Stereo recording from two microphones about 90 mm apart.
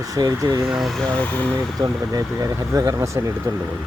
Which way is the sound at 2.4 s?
35° right (ahead or behind).